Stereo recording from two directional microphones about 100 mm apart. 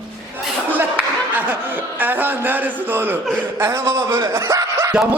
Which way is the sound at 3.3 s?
25° right (ahead or behind).